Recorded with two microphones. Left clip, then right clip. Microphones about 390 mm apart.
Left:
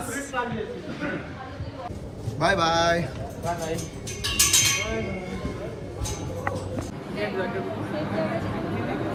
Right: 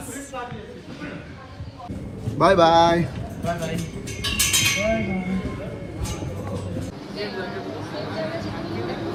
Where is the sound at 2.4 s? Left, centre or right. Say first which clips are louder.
Right 7 dB; centre.